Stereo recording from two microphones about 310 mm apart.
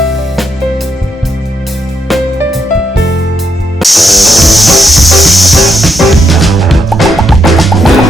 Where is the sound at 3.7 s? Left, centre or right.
Centre.